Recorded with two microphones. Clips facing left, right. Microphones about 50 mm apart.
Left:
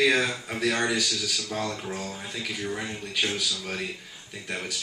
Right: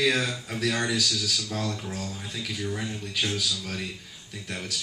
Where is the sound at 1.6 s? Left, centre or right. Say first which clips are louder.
Left 1 dB; left.